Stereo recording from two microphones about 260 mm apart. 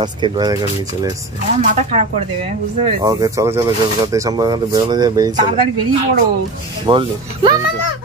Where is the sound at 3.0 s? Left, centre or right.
Centre.